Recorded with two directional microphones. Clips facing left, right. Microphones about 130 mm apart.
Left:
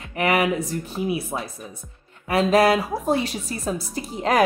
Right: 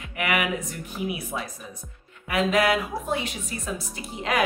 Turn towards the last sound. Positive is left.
turn(degrees=40)  # may be behind; listen again after turning